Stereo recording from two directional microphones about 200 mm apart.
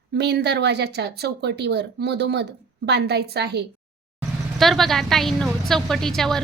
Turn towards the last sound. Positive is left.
turn(degrees=0)  # may be behind; listen again after turning